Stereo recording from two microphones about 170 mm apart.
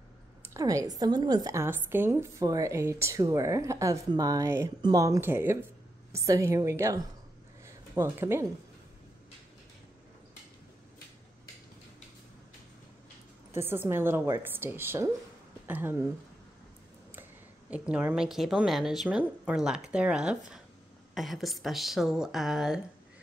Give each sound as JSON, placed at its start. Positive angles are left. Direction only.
{"t": 0.6, "sound": "a woman's voice", "side_deg": -20}
{"t": 7.6, "sound": "a sound", "side_deg": -15}
{"t": 13.6, "sound": "a woman's voice", "side_deg": -15}
{"t": 17.6, "sound": "speech", "side_deg": -10}